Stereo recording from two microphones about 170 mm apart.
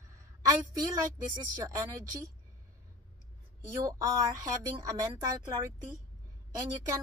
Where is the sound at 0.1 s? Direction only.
20° right (ahead or behind).